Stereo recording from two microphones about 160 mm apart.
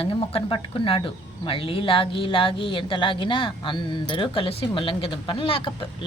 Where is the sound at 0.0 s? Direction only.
35° left (ahead or behind).